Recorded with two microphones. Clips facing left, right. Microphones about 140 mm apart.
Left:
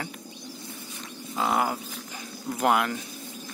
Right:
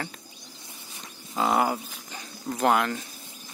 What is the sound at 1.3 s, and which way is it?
Bird, 5° right (ahead or behind).